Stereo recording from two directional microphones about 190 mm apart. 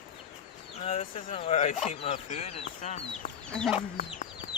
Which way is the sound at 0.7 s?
35° left (ahead or behind).